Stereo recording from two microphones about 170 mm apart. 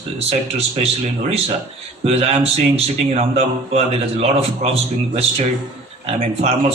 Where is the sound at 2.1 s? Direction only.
40° right (ahead or behind).